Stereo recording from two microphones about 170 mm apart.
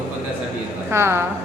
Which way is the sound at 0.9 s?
15° right (ahead or behind).